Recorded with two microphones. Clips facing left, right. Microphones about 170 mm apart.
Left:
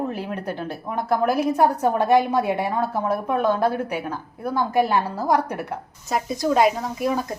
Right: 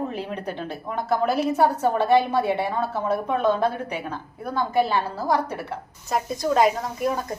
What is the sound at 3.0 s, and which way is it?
Speech, 5° left (ahead or behind).